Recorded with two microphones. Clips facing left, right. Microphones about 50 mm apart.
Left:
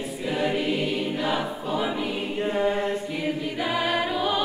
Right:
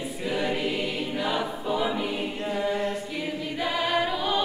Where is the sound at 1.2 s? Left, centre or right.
Centre.